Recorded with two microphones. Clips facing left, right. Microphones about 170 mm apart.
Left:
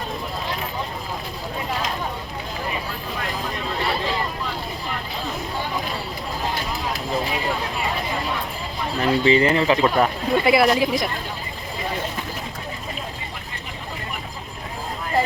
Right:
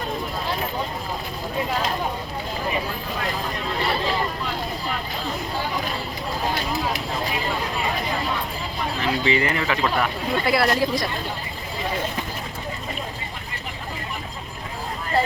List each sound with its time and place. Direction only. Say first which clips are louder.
9.0 s speech: left 6 dB; 35° left (ahead or behind); by 11.1 s 15° left (ahead or behind)